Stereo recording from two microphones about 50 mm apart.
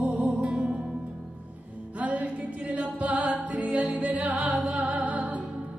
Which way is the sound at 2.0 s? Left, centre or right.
Right.